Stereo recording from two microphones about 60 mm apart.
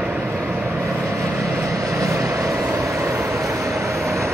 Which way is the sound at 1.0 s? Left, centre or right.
Right.